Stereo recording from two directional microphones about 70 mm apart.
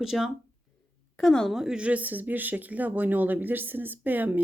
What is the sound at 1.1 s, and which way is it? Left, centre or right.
Speech, centre.